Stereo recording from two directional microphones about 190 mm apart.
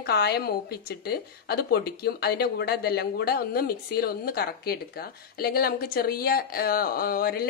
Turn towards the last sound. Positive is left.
turn(degrees=55)  # may be behind; listen again after turning